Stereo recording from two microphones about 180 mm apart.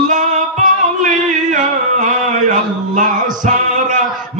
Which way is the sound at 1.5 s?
45° right (ahead or behind).